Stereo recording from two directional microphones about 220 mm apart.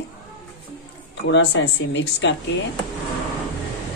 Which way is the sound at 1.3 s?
55° left (ahead or behind).